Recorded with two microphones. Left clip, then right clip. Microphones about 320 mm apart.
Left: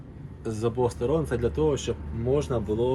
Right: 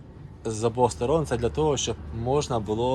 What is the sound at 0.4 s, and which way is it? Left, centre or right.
Speech, centre.